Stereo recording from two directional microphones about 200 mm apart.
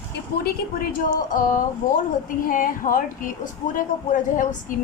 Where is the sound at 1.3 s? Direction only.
40° left (ahead or behind).